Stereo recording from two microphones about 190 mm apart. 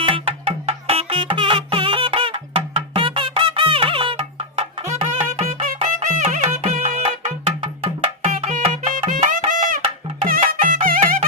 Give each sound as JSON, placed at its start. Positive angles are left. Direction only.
{"t": 0.0, "sound": "music", "side_deg": -30}
{"t": 8.2, "sound": "music", "side_deg": -35}